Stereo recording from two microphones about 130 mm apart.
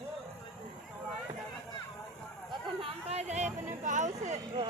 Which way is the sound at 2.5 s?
50° right (ahead or behind).